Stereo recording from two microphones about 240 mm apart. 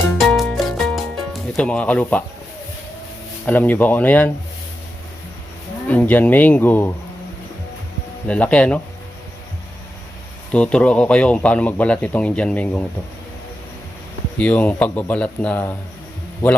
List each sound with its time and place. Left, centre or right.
0.3 s music: centre
3.4 s speech: centre
5.9 s speech: centre
8.3 s speech: centre
10.5 s speech: centre
14.3 s speech: centre